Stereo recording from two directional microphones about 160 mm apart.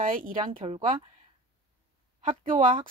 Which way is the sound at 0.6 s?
35° right (ahead or behind).